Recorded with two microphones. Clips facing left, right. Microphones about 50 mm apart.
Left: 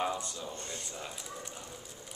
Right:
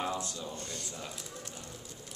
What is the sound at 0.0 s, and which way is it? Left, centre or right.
A man's voice, centre.